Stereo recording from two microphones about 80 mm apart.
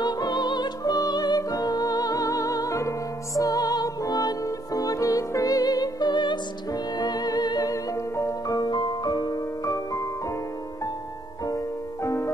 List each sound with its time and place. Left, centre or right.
0.0 s music: left
6.7 s music: left
8.5 s music: left
11.4 s music: left